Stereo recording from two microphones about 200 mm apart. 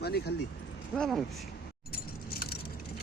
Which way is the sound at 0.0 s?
55° left (ahead or behind).